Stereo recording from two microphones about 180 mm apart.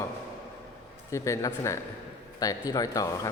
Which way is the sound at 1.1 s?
15° left (ahead or behind).